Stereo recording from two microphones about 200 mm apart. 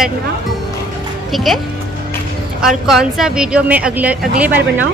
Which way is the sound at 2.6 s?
Centre (ahead or behind).